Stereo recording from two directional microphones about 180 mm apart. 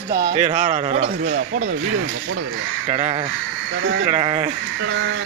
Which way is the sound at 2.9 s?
35° right (ahead or behind).